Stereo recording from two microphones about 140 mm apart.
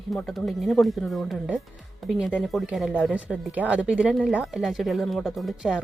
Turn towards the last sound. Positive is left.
turn(degrees=0)  # may be behind; listen again after turning